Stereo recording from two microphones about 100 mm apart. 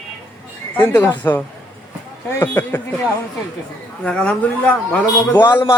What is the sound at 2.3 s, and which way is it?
Speech, 25° left (ahead or behind).